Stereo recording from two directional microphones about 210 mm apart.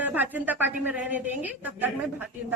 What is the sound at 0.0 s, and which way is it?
A woman's voice, 10° right (ahead or behind).